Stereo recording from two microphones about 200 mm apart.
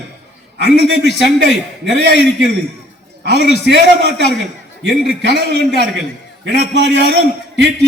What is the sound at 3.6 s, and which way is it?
A man's voice, 55° right (ahead or behind).